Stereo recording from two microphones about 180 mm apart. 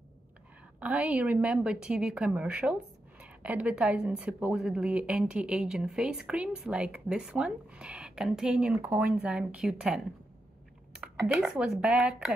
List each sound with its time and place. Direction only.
0.7 s a woman's voice: 5° right (ahead or behind)
11.2 s a woman's voice: 5° right (ahead or behind)